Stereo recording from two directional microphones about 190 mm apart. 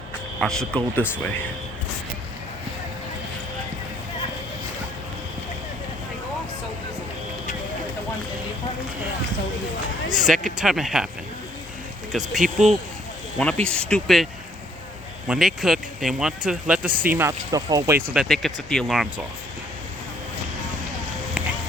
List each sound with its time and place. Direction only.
0.3 s speech: 5° left (ahead or behind)
10.2 s speech: centre (ahead or behind)
12.4 s speech: 40° right (ahead or behind)
13.4 s speech: 5° left (ahead or behind)
15.3 s speech: centre (ahead or behind)
18.2 s speech: centre (ahead or behind)